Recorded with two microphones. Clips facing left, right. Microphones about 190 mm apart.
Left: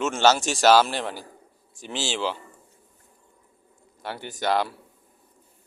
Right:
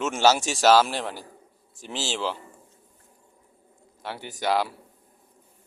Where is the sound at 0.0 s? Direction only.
5° right (ahead or behind).